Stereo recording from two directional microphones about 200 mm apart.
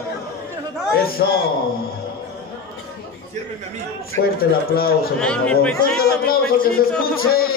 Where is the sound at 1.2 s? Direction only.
55° left (ahead or behind).